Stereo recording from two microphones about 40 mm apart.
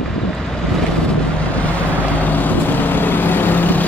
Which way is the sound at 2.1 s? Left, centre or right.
Left.